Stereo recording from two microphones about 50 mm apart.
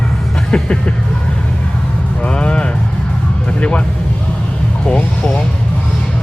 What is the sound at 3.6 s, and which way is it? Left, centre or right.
Music, left.